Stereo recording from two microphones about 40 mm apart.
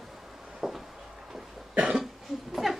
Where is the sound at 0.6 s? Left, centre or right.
Centre.